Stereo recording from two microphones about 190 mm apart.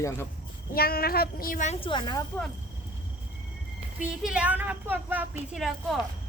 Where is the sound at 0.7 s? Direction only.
50° left (ahead or behind); by 2.2 s 20° left (ahead or behind).